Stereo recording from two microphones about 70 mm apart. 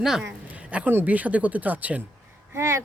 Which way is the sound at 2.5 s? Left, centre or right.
Right.